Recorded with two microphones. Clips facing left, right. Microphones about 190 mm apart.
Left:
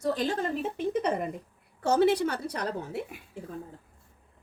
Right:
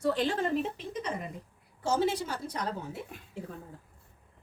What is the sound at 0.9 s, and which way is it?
A woman's voice, 60° left (ahead or behind).